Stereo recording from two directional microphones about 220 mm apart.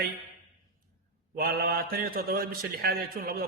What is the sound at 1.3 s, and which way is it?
A man's voice, 40° right (ahead or behind).